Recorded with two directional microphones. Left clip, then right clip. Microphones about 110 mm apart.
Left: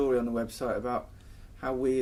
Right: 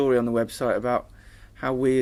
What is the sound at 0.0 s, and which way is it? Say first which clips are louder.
Speech: right 6 dB; 35° right (ahead or behind).